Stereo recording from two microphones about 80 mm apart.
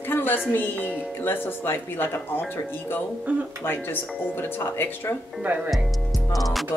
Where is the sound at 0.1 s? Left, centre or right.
Left.